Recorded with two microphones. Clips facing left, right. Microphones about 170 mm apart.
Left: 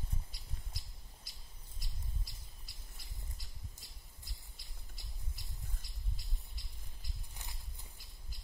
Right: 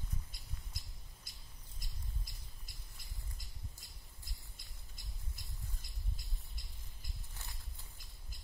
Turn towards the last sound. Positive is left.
turn(degrees=15)  # may be behind; listen again after turning